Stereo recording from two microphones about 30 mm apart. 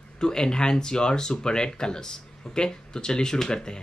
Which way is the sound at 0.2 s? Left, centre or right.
Left.